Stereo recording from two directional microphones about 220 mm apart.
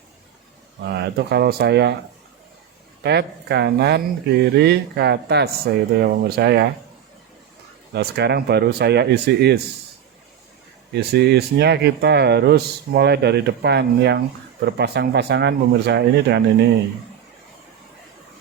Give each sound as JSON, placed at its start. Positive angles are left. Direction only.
{"t": 0.9, "sound": "speech", "side_deg": -50}
{"t": 3.0, "sound": "speech", "side_deg": -50}
{"t": 7.9, "sound": "speech", "side_deg": -50}
{"t": 10.9, "sound": "speech", "side_deg": -50}